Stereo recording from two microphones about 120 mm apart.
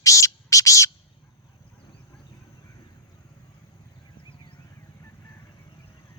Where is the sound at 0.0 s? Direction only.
25° left (ahead or behind).